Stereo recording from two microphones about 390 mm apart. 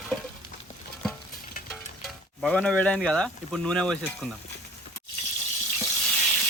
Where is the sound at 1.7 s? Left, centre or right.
Centre.